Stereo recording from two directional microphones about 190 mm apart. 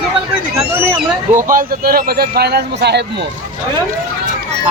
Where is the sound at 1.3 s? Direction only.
45° right (ahead or behind).